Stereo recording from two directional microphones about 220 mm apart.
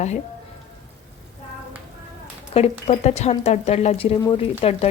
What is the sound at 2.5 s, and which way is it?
A woman's voice, 25° left (ahead or behind).